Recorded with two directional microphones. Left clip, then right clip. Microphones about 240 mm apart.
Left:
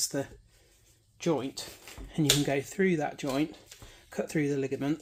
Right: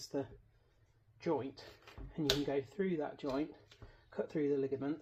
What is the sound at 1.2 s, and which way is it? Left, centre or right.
Speech, left.